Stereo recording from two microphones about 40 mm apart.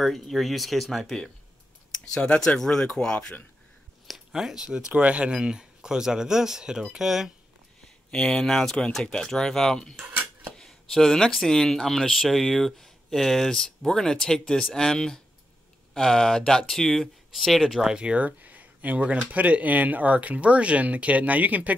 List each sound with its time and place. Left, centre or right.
0.0 s speech: centre
2.2 s speech: left
4.3 s speech: centre
8.1 s speech: centre
17.6 s speech: centre
17.9 s speech: right
18.2 s speech: right